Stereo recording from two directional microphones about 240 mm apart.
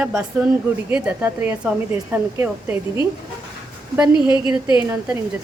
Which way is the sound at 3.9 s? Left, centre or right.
Centre.